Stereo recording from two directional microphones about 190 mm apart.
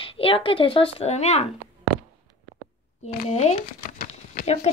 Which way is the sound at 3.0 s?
35° left (ahead or behind).